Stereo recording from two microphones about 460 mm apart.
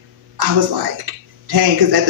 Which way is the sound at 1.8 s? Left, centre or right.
Right.